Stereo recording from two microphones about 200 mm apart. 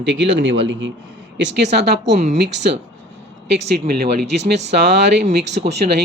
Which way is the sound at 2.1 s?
35° right (ahead or behind).